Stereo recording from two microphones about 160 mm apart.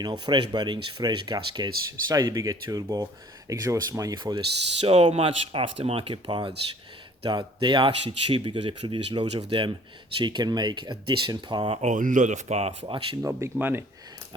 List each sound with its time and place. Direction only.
0.0 s speech: 25° right (ahead or behind)
4.8 s speech: 35° right (ahead or behind)
11.8 s speech: 50° right (ahead or behind); by 13.0 s 35° right (ahead or behind)
13.2 s speech: 15° right (ahead or behind)